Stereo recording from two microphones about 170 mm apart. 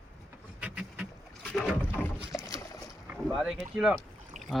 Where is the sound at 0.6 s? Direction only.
5° right (ahead or behind).